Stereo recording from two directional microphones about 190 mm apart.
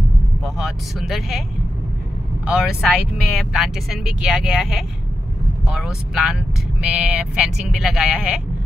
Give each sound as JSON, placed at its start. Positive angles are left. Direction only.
{"t": 0.6, "sound": "speech", "side_deg": 0}
{"t": 2.4, "sound": "speech", "side_deg": -5}